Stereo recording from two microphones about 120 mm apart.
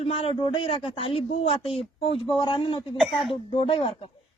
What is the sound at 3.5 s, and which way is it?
Speech, 45° left (ahead or behind).